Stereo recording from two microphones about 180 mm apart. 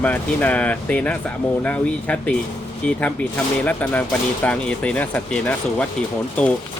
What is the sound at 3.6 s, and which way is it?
Speech, 10° left (ahead or behind).